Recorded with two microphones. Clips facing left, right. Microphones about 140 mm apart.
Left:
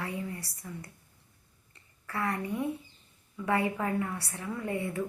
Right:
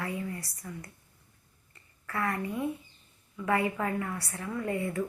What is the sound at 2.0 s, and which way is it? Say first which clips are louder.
Speech: right 1 dB; 20° left (ahead or behind).